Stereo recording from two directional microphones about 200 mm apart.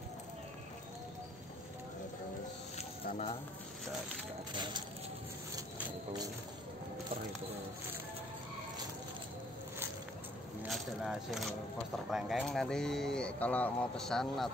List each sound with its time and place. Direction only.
3.1 s speech: 35° left (ahead or behind)
4.5 s a sound: 20° right (ahead or behind)
10.6 s speech: 5° right (ahead or behind)